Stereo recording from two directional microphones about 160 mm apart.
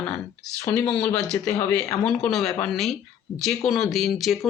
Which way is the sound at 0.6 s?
15° left (ahead or behind).